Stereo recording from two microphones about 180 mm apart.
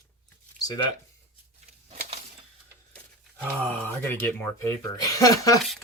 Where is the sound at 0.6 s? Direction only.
20° left (ahead or behind).